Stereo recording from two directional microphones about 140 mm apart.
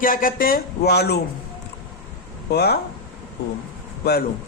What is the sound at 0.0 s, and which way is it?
Speech, 90° left.